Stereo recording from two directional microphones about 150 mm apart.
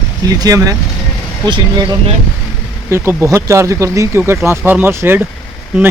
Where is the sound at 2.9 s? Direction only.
15° right (ahead or behind).